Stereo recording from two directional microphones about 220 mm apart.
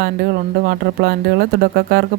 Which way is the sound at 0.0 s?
45° right (ahead or behind).